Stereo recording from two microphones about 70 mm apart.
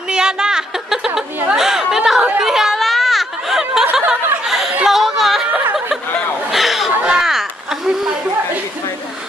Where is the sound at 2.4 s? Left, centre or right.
Centre.